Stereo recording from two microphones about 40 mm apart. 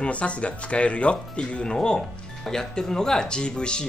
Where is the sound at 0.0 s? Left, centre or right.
Left.